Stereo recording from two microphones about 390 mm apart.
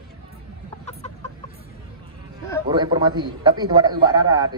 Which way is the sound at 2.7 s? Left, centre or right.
Centre.